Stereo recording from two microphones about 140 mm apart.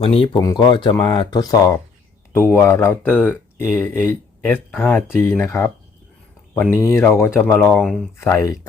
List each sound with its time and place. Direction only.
0.0 s speech: 40° left (ahead or behind)
0.3 s speech: 30° left (ahead or behind); by 8.0 s 5° left (ahead or behind)